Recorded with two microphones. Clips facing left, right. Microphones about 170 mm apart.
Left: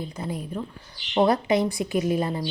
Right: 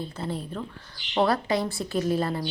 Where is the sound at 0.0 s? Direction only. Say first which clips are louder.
Even; 15° left (ahead or behind).